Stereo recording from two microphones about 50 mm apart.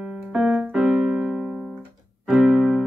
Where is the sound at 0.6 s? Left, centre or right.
Centre.